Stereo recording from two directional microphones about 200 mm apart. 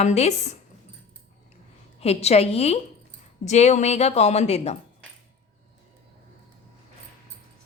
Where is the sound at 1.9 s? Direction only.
30° left (ahead or behind).